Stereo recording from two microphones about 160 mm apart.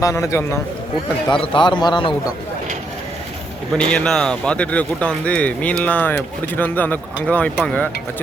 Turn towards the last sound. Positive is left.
turn(degrees=10)  # may be behind; listen again after turning